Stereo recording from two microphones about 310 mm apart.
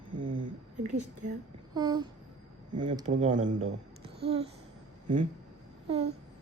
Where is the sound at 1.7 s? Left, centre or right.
Centre.